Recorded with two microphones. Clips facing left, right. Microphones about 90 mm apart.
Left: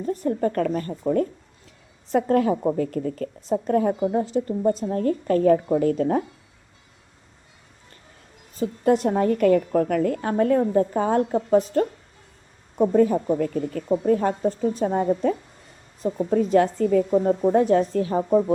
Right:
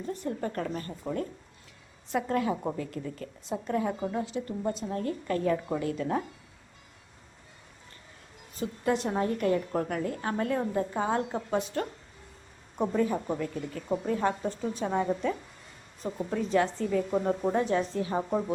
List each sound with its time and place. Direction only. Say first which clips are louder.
0.0 s speech: left 9 dB; 45° left (ahead or behind)
8.5 s a woman's voice: left 8 dB; 40° left (ahead or behind)
12.9 s speech: left 9 dB; 55° left (ahead or behind)
16.1 s speech: left 8 dB; 45° left (ahead or behind)